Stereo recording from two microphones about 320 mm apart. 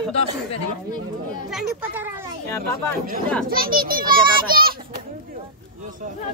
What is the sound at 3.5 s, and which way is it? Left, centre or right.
A child's voice, right.